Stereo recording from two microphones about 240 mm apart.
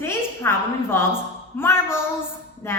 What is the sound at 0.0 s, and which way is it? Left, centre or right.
A woman's voice, centre.